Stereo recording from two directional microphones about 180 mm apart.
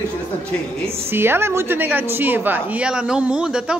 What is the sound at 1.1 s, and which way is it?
A woman's voice, 10° right (ahead or behind).